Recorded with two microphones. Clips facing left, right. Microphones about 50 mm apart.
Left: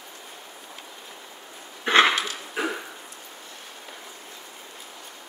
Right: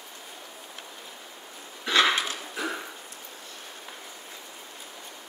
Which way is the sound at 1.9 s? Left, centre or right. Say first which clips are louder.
Left 4 dB; left.